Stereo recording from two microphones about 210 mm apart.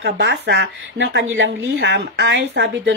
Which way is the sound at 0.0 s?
55° right (ahead or behind).